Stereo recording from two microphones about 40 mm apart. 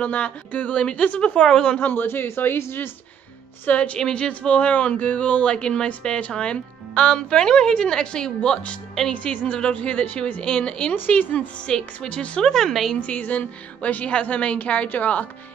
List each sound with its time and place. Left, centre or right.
0.0 s a woman's voice: left
1.8 s speech: left
2.0 s speech: left
3.6 s a woman's voice: left
4.0 s a woman's voice: left
4.3 s a woman's voice: left
9.1 s a woman's voice: left
11.1 s a woman's voice: left
11.6 s a woman's voice: centre
12.1 s a woman's voice: left
12.4 s a woman's voice: centre
13.0 s a woman's voice: left
14.9 s speech: left